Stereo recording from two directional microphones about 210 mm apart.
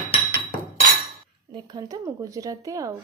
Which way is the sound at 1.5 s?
20° right (ahead or behind).